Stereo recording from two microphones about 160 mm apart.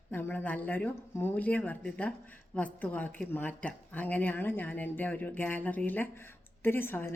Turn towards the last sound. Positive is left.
turn(degrees=15)  # may be behind; listen again after turning